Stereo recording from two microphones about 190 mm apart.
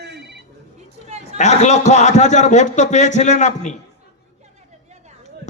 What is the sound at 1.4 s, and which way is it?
A man's voice, 40° left (ahead or behind).